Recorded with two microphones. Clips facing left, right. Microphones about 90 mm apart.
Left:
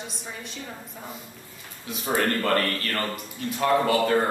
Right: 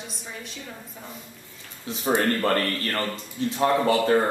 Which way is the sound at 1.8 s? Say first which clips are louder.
Right 3 dB; 30° right (ahead or behind).